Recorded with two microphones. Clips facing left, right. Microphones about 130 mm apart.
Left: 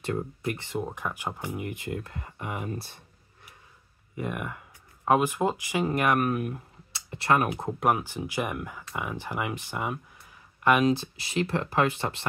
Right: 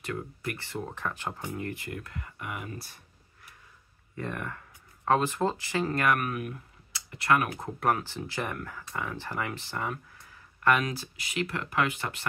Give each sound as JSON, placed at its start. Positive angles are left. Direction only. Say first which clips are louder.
{"t": 0.0, "sound": "speech", "louder": "left 5 dB", "side_deg": 25}
{"t": 4.1, "sound": "speech", "louder": "left 3 dB", "side_deg": 15}
{"t": 6.2, "sound": "speech", "louder": "left 5 dB", "side_deg": 30}